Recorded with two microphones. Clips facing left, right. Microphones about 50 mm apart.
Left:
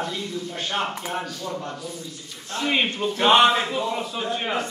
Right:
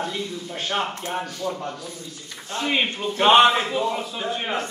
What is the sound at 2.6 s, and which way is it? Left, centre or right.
Speech, centre.